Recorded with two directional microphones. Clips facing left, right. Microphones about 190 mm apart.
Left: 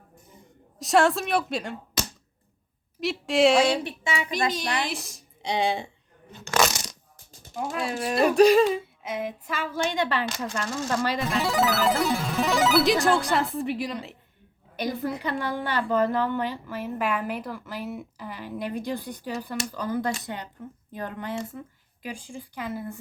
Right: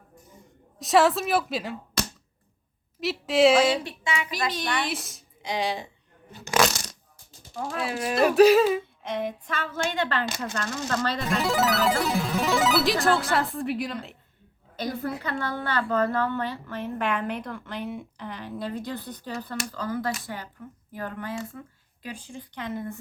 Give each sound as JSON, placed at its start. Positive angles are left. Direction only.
{"t": 0.8, "sound": "music", "side_deg": 0}
{"t": 3.0, "sound": "music", "side_deg": 0}
{"t": 3.8, "sound": "speech", "side_deg": 25}
{"t": 4.8, "sound": "music", "side_deg": 0}
{"t": 5.5, "sound": "speech", "side_deg": 25}
{"t": 6.3, "sound": "a sound", "side_deg": -10}
{"t": 7.7, "sound": "a woman's voice", "side_deg": 0}
{"t": 11.2, "sound": "music", "side_deg": 0}
{"t": 15.2, "sound": "a woman's voice", "side_deg": 15}
{"t": 22.0, "sound": "a woman's voice", "side_deg": 10}